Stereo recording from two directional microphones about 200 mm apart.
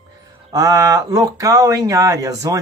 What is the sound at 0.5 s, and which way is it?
Speech, 15° right (ahead or behind).